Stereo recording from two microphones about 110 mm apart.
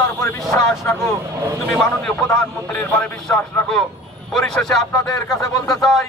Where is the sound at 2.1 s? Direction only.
25° left (ahead or behind).